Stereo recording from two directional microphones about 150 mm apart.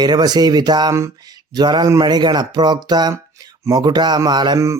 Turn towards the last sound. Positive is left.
turn(degrees=-20)  # may be behind; listen again after turning